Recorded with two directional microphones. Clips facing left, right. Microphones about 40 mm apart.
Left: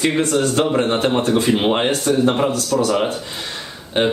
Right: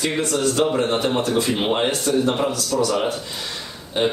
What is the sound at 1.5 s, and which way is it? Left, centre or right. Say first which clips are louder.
Speech: left 5 dB; centre.